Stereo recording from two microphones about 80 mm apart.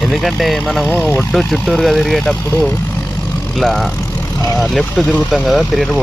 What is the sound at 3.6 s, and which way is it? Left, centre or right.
Speech, centre.